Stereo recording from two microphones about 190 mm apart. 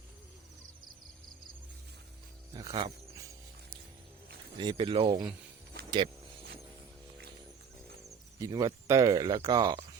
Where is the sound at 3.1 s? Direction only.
15° right (ahead or behind).